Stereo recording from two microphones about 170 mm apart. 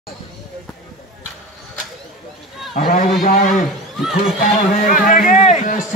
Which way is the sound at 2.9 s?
55° left (ahead or behind).